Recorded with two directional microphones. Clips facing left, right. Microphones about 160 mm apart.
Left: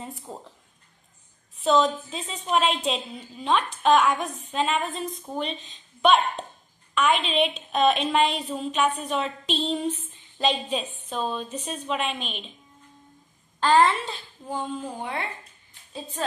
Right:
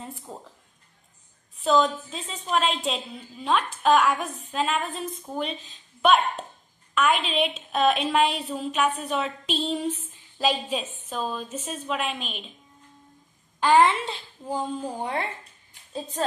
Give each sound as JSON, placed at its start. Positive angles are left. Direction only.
{"t": 0.3, "sound": "a woman's voice", "side_deg": 0}
{"t": 1.6, "sound": "a woman's voice", "side_deg": 0}
{"t": 13.6, "sound": "a woman's voice", "side_deg": -15}
{"t": 14.5, "sound": "speech", "side_deg": -40}